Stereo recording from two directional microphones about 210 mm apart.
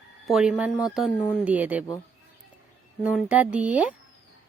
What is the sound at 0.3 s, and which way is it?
Speech, 5° right (ahead or behind).